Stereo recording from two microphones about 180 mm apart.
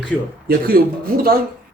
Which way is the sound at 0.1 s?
Centre (ahead or behind).